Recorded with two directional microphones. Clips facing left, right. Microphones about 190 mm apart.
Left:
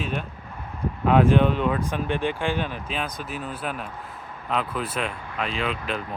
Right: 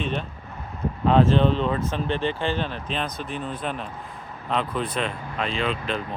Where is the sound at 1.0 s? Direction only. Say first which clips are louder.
Even; 10° left (ahead or behind).